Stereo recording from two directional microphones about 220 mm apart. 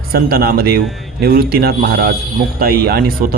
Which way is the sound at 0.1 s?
45° right (ahead or behind).